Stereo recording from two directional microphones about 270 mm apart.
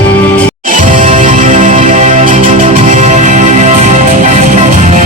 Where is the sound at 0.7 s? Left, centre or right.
Right.